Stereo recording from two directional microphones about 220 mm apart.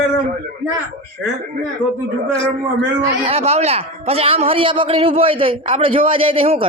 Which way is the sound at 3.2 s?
30° right (ahead or behind).